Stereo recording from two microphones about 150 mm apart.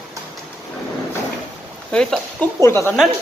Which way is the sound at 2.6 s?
20° left (ahead or behind).